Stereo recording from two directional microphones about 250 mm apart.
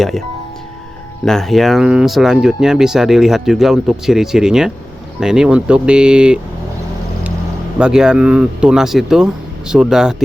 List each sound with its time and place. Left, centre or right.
1.2 s speech: centre
7.8 s speech: centre